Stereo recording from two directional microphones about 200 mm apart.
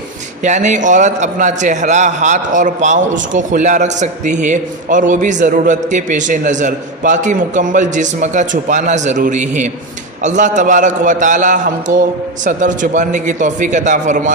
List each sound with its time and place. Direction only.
0.4 s a man's voice: 35° right (ahead or behind)